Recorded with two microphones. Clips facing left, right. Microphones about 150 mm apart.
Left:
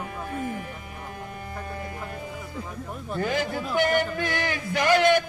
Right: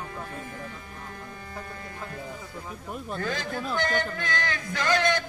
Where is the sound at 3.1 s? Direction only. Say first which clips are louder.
Left 5 dB; 15° left (ahead or behind).